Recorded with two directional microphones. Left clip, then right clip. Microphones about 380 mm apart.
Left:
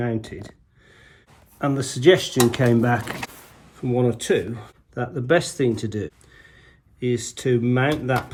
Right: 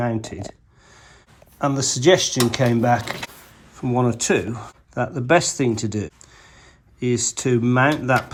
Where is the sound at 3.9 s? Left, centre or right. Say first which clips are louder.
Right 1 dB; centre.